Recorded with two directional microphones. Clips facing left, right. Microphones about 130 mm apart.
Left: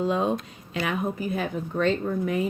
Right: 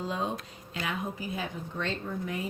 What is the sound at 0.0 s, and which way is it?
A woman's voice, 65° left (ahead or behind).